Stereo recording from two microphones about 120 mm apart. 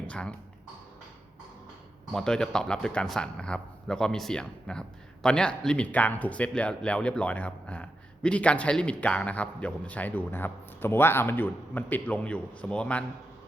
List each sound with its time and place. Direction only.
0.1 s a man's voice: 10° left (ahead or behind)
2.1 s a man's voice: 5° left (ahead or behind)